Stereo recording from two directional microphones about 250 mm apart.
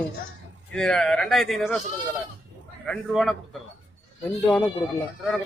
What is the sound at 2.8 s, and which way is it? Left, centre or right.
Speech, centre.